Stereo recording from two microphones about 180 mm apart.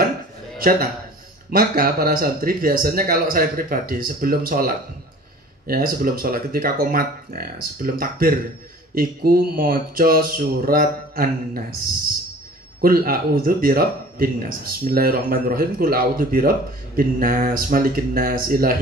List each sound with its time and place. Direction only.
0.6 s a man's voice: 55° right (ahead or behind)
12.8 s speech: 55° right (ahead or behind)